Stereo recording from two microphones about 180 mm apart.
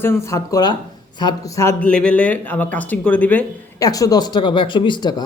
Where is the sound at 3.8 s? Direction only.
20° left (ahead or behind).